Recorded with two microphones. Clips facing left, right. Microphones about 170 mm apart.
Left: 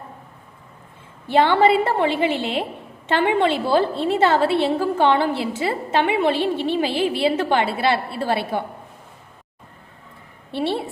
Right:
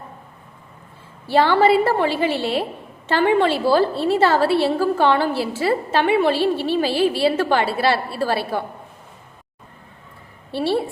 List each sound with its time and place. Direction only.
1.3 s a woman's voice: 20° left (ahead or behind)
10.5 s a woman's voice: 20° left (ahead or behind)